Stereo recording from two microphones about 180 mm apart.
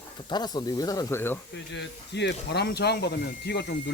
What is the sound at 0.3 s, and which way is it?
Speech, 25° left (ahead or behind).